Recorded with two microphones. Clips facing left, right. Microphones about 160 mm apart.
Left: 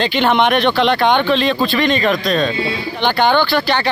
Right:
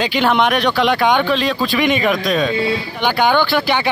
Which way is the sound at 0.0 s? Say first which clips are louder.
Left 1 dB; 5° right (ahead or behind).